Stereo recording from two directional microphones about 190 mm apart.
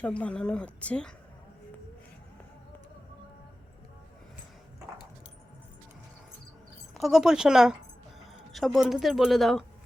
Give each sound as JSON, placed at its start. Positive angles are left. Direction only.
{"t": 0.0, "sound": "speech", "side_deg": 5}
{"t": 6.9, "sound": "speech", "side_deg": 0}